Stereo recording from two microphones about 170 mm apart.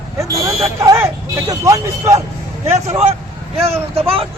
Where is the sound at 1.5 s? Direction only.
20° right (ahead or behind).